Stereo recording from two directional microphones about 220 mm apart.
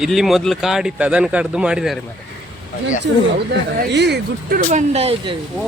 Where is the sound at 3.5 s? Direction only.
50° right (ahead or behind).